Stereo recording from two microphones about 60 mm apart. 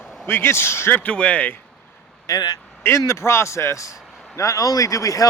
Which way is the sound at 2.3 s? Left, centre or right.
Left.